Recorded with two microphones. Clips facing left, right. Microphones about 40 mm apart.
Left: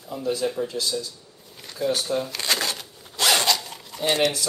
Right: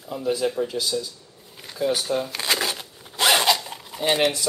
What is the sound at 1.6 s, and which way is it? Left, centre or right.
Shuffling cards, centre.